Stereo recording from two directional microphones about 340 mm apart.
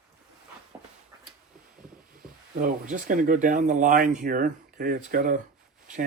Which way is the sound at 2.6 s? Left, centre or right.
Right.